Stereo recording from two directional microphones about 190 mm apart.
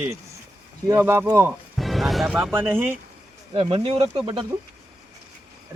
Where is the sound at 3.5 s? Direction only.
30° right (ahead or behind).